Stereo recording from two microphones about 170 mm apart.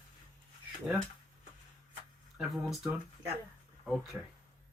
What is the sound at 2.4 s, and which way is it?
Speech, 5° right (ahead or behind).